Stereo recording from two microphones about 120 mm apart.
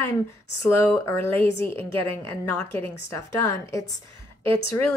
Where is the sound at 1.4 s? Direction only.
50° right (ahead or behind).